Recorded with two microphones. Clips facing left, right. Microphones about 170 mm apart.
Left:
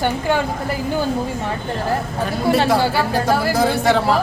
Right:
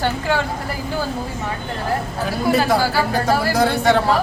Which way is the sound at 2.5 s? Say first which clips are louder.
Left 1 dB; 25° left (ahead or behind).